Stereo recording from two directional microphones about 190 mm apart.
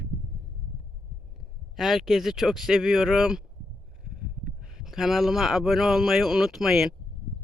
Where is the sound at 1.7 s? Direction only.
Centre (ahead or behind).